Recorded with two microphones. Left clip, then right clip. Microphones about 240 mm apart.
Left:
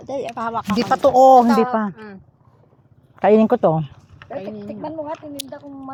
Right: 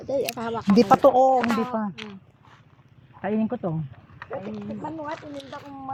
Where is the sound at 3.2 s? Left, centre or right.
Left.